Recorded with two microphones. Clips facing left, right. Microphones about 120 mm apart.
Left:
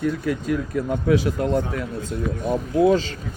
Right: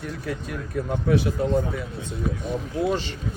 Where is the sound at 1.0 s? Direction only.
90° left.